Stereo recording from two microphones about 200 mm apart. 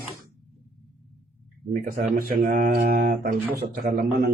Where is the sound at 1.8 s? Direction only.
45° right (ahead or behind).